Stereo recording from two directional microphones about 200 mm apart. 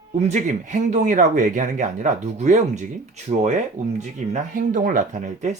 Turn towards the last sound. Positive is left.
turn(degrees=-40)  # may be behind; listen again after turning